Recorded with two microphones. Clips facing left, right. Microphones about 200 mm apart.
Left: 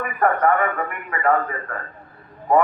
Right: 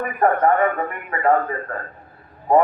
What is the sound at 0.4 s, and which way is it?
A man's voice, 25° right (ahead or behind).